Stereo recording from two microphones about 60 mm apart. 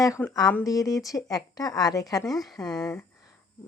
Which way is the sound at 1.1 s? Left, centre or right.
Left.